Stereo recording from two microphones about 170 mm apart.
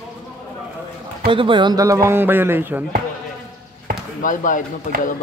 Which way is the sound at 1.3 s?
30° right (ahead or behind).